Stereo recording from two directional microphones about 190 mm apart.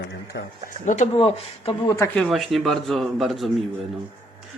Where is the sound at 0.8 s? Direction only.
40° left (ahead or behind).